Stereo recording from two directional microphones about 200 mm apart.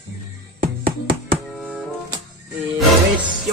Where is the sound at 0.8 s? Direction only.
25° right (ahead or behind).